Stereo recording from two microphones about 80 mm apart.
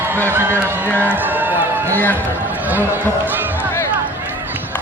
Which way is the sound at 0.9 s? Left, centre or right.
Right.